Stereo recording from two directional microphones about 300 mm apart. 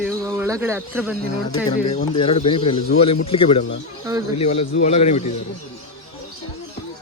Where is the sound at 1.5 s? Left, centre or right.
Centre.